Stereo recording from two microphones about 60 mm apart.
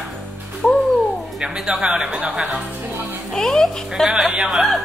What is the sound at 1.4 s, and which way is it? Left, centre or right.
Speech, centre.